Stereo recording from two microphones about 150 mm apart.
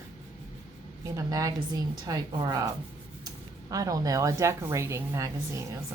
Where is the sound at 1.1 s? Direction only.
25° right (ahead or behind).